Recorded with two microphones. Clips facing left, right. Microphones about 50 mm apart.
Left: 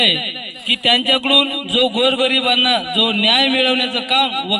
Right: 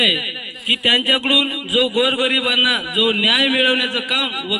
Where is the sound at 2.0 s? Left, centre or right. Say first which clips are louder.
Left 1 dB; right.